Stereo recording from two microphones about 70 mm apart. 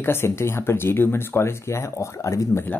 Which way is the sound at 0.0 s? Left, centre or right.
Left.